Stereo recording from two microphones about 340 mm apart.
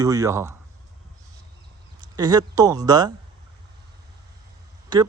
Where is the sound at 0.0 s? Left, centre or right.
Centre.